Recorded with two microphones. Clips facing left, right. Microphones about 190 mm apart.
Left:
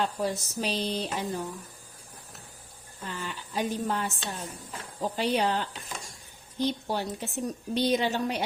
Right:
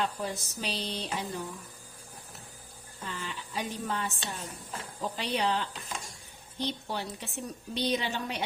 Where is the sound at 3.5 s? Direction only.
40° left (ahead or behind).